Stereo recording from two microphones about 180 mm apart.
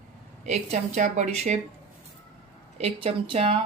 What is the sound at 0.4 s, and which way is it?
A woman's voice, 40° right (ahead or behind).